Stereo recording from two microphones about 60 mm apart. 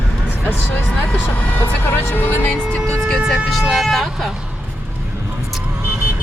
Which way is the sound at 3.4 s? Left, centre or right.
Centre.